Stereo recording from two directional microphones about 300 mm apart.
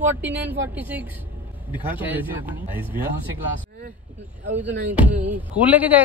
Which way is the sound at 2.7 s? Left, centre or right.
Centre.